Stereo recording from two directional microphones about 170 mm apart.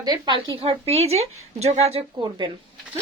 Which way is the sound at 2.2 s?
25° right (ahead or behind).